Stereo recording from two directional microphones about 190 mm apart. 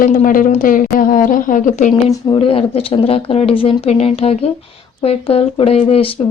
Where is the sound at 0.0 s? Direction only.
45° left (ahead or behind).